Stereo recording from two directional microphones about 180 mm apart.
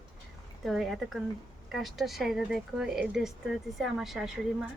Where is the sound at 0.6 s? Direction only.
Centre (ahead or behind).